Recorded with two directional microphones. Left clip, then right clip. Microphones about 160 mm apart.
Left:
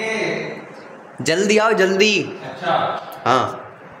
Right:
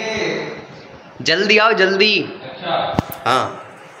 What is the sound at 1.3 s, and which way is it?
Speech, 35° left (ahead or behind).